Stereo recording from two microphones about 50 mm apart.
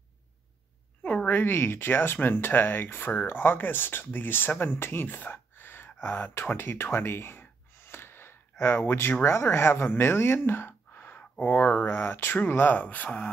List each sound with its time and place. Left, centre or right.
1.0 s a sound: left
1.3 s speech: left
6.5 s gasp: left
9.2 s speech: left
11.1 s speech: left